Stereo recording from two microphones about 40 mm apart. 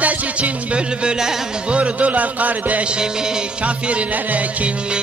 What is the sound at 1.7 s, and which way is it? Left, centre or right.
A man's voice, right.